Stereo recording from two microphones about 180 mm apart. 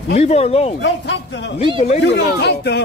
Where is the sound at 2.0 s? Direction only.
70° left (ahead or behind).